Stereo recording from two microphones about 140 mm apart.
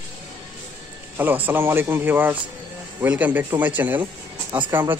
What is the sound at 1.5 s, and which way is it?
Speech, 15° right (ahead or behind).